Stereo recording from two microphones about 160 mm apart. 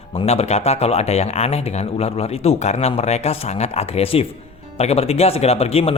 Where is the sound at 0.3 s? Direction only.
40° left (ahead or behind).